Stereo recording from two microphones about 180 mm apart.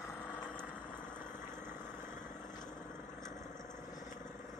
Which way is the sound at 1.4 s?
15° right (ahead or behind).